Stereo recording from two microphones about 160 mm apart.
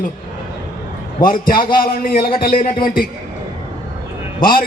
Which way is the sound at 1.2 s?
60° left (ahead or behind).